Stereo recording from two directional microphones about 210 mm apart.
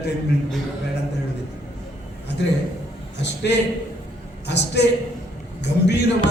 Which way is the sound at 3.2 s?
55° left (ahead or behind).